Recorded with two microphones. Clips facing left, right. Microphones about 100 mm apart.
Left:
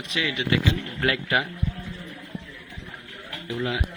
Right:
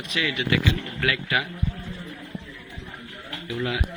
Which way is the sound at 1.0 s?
35° left (ahead or behind).